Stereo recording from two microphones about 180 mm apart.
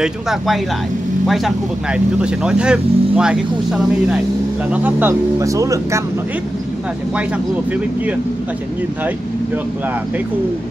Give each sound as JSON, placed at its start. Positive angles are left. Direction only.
{"t": 0.0, "sound": "speech", "side_deg": 0}